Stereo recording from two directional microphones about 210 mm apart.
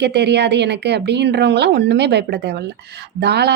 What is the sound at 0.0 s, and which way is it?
A woman's voice, 55° right (ahead or behind).